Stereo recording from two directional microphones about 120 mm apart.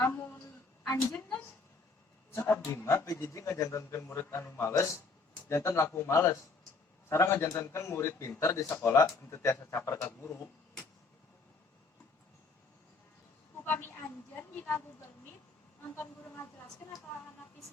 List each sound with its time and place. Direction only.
0.0 s a sound: 20° left (ahead or behind)
2.3 s a man's voice: 20° left (ahead or behind)
13.7 s a woman's voice: 20° left (ahead or behind)